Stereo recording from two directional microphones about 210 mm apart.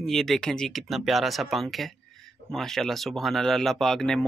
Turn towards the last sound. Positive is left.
turn(degrees=0)  # may be behind; listen again after turning